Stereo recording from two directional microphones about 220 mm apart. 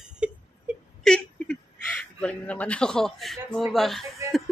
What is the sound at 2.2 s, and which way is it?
Speech, 5° left (ahead or behind).